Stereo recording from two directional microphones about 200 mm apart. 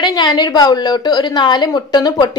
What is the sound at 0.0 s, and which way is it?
A woman's voice, 20° left (ahead or behind).